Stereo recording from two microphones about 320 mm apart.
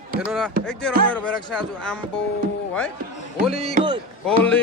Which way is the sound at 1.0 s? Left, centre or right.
Centre.